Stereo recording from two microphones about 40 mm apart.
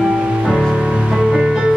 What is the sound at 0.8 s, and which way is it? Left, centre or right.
Music, centre.